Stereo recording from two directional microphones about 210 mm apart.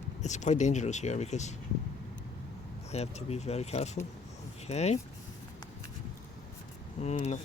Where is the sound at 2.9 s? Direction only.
30° left (ahead or behind).